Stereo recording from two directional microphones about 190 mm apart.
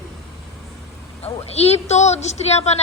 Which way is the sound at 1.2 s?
35° left (ahead or behind).